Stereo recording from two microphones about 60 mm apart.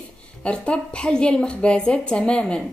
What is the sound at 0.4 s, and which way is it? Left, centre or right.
Speech, centre.